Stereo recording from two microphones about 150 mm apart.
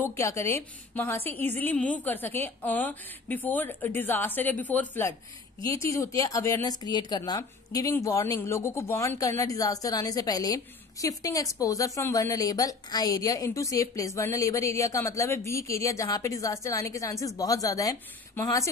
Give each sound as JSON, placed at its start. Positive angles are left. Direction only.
{"t": 0.0, "sound": "a woman's voice", "side_deg": 20}